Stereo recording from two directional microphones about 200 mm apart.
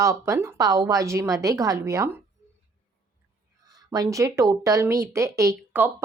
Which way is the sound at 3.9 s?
15° right (ahead or behind).